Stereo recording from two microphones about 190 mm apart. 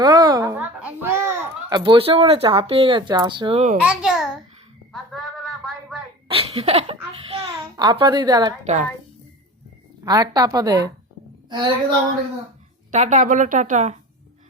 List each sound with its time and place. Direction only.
0.0 s a sound: 20° right (ahead or behind)
1.8 s speech: 30° right (ahead or behind)
3.8 s a child's voice: 5° right (ahead or behind)
6.2 s speech: 30° right (ahead or behind)
8.6 s a woman's voice: 40° right (ahead or behind)
10.0 s a woman's voice: 20° right (ahead or behind)
12.9 s a woman's voice: 40° right (ahead or behind)